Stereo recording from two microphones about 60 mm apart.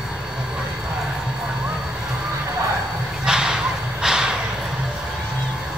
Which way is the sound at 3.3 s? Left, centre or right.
Centre.